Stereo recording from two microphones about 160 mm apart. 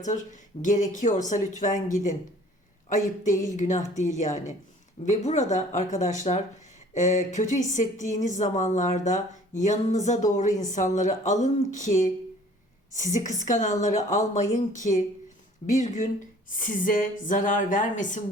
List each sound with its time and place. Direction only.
0.0 s a woman's voice: 50° left (ahead or behind)